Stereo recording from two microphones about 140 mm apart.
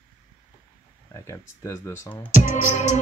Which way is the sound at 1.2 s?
20° left (ahead or behind).